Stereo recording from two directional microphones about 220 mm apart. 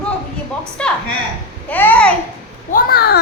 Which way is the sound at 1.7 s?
5° left (ahead or behind).